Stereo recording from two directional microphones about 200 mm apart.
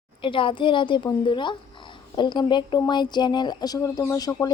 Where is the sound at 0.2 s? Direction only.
25° left (ahead or behind).